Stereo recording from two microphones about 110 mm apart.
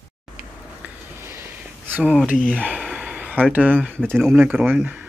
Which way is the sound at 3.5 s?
15° right (ahead or behind).